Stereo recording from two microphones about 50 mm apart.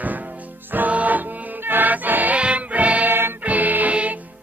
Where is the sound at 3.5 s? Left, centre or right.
Right.